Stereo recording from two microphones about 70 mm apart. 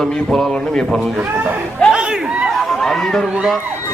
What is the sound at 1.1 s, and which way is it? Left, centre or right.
Speech, right.